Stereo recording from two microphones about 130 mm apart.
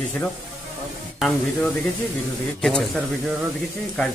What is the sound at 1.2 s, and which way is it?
Speech, centre (ahead or behind).